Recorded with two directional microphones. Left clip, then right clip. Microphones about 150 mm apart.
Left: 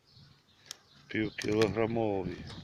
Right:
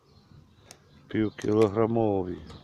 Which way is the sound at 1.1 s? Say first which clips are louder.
Right 5 dB; 45° right (ahead or behind).